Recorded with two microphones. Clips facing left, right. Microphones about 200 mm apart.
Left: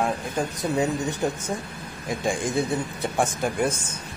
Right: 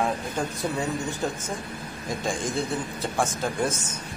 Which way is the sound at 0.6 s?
20° left (ahead or behind).